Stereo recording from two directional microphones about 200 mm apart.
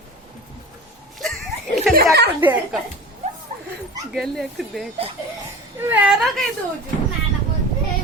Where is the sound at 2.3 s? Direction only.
10° right (ahead or behind).